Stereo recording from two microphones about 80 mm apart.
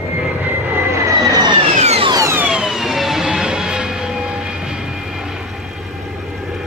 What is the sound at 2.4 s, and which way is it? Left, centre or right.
Emergency vehicle, centre.